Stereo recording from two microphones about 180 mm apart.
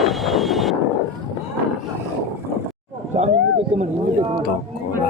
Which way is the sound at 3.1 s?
40° right (ahead or behind).